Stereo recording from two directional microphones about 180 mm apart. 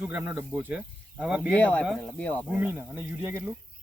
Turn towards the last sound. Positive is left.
turn(degrees=-10)  # may be behind; listen again after turning